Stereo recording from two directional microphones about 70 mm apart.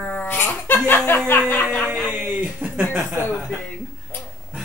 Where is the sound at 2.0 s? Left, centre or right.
Right.